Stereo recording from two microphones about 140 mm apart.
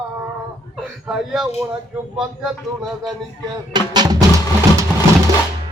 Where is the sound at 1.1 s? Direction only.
5° right (ahead or behind).